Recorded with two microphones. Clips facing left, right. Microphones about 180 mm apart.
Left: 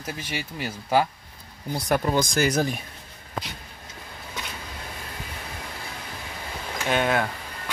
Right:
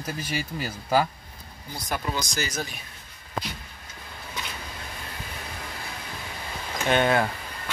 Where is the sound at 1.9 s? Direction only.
50° left (ahead or behind).